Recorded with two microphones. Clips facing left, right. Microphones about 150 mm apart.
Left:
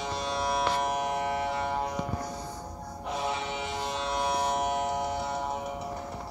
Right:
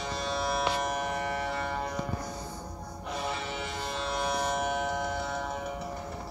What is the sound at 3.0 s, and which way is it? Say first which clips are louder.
Music: left 3 dB; 20° left (ahead or behind).